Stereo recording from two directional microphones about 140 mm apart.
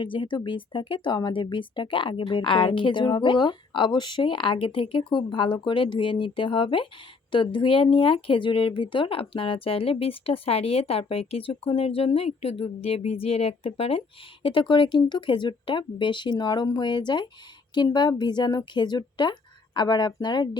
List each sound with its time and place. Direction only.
0.0 s speech: 35° left (ahead or behind)